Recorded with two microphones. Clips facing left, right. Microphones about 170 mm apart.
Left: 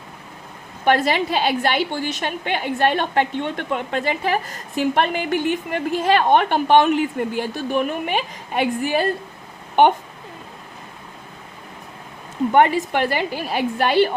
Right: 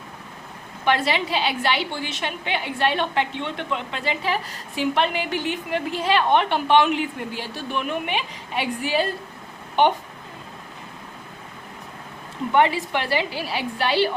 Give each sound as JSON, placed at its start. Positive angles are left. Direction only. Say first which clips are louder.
{"t": 0.9, "sound": "a woman's voice", "louder": "left 4 dB", "side_deg": 45}
{"t": 12.5, "sound": "a woman's voice", "louder": "left 3 dB", "side_deg": 50}